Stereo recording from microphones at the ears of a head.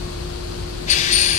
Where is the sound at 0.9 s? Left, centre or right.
Left.